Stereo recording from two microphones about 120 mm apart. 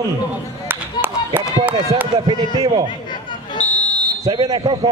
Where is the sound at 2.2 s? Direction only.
35° right (ahead or behind).